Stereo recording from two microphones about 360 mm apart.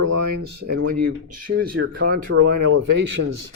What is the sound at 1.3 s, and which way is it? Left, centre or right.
Speech, right.